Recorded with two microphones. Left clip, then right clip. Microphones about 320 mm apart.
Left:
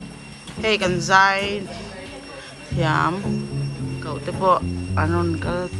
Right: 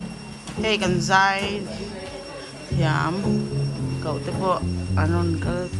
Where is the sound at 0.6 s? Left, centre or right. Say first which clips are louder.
Left 2 dB; centre.